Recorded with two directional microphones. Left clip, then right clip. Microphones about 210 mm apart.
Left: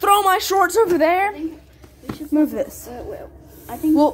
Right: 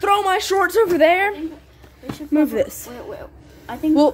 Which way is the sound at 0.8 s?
15° right (ahead or behind).